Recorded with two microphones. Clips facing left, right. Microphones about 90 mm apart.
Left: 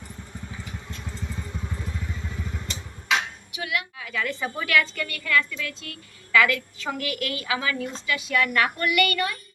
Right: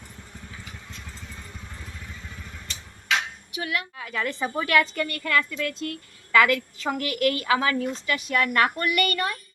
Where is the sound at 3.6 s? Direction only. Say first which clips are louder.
Even; 35° right (ahead or behind).